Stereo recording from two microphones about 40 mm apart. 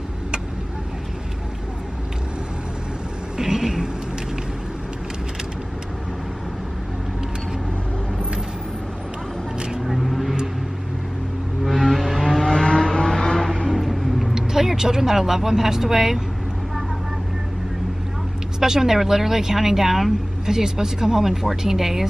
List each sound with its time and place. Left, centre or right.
3.3 s vehicle: centre
9.8 s vehicle: centre
11.6 s music: centre
12.5 s a sound: left
13.7 s a sound: centre
14.3 s speech: centre
18.6 s speech: centre